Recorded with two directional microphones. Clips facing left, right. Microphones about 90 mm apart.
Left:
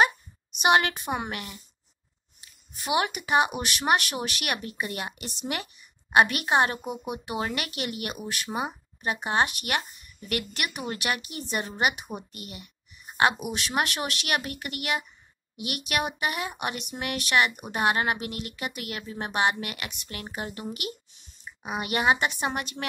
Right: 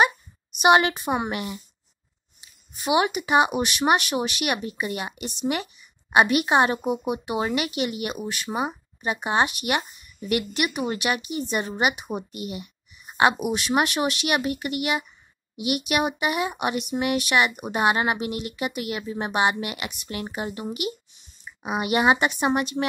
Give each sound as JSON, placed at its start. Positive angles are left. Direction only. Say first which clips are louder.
{"t": 0.6, "sound": "speech", "louder": "right 4 dB", "side_deg": -20}
{"t": 2.7, "sound": "speech", "louder": "right 5 dB", "side_deg": -10}
{"t": 6.0, "sound": "speech", "louder": "right 3 dB", "side_deg": -10}